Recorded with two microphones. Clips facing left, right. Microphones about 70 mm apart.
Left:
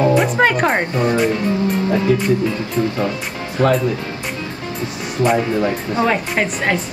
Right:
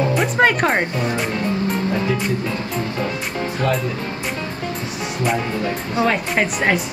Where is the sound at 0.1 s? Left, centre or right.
Centre.